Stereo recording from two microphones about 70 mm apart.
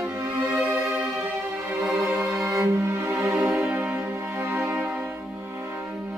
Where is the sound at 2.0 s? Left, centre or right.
Right.